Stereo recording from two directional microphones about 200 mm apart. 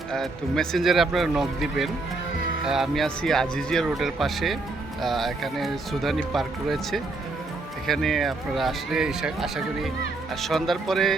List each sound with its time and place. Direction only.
0.1 s speech: centre (ahead or behind)